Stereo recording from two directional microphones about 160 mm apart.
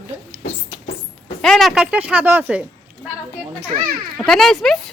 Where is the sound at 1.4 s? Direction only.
5° left (ahead or behind).